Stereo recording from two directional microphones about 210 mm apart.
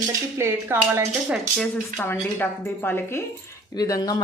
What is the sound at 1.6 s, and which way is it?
Speech, 10° left (ahead or behind).